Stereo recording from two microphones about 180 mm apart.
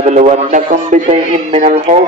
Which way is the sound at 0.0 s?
40° right (ahead or behind).